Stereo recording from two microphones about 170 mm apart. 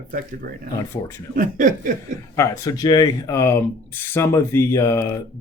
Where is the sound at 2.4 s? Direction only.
20° left (ahead or behind).